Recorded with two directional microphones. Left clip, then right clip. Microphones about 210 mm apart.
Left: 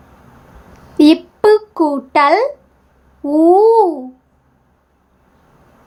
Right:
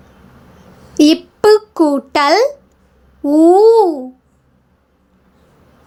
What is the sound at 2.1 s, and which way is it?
Speech, 20° right (ahead or behind).